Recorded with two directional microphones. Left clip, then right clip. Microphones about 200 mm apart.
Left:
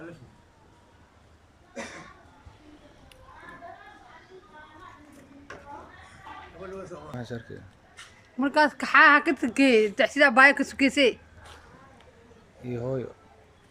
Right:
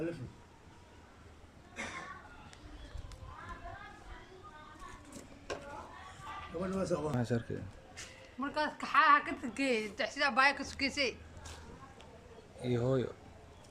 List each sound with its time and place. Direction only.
6.7 s a sound: 55° right (ahead or behind)
7.1 s speech: 5° right (ahead or behind)
8.4 s a woman's voice: 50° left (ahead or behind)
12.6 s speech: 5° left (ahead or behind)